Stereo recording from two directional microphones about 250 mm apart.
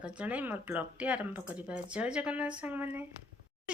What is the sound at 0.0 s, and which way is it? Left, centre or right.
Speech, centre.